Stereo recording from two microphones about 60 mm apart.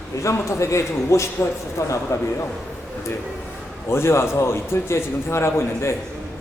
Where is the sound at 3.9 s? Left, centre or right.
Left.